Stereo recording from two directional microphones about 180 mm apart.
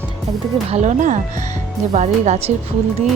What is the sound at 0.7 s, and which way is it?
Speech, 40° right (ahead or behind).